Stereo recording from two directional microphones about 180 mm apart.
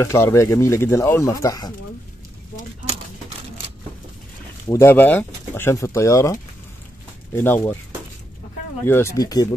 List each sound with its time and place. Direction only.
0.0 s speech: 15° left (ahead or behind)
2.9 s a sound: 35° right (ahead or behind)
4.6 s speech: 15° left (ahead or behind)
7.3 s speech: 10° left (ahead or behind)
8.8 s speech: 15° left (ahead or behind)